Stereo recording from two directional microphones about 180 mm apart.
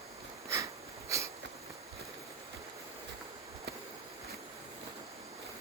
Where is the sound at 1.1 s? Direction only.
15° right (ahead or behind).